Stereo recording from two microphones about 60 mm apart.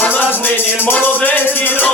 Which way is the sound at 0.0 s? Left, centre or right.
Left.